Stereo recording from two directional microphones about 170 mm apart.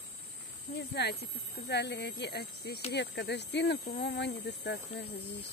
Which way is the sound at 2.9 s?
85° left.